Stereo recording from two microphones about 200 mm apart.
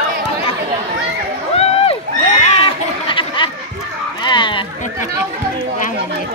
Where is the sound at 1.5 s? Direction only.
30° left (ahead or behind).